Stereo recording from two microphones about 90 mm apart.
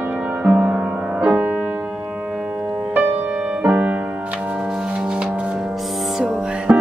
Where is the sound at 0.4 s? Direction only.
15° right (ahead or behind).